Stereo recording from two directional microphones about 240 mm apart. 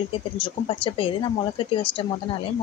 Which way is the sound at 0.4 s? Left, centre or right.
Left.